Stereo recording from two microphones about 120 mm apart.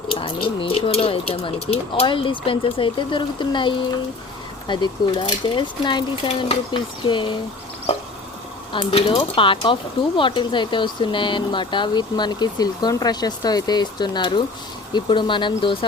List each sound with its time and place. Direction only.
0.1 s speech: 50° left (ahead or behind)
8.7 s speech: 50° left (ahead or behind)